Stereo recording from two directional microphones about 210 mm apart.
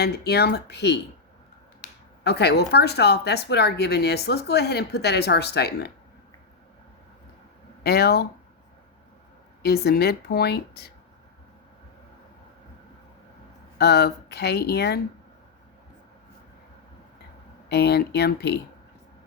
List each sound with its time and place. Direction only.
0.0 s speech: 50° left (ahead or behind)
7.9 s speech: 50° left (ahead or behind)
9.6 s speech: 50° left (ahead or behind)
13.7 s speech: 50° left (ahead or behind)
17.7 s speech: 50° left (ahead or behind)